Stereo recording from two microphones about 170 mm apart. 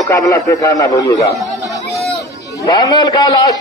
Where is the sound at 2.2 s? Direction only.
20° left (ahead or behind).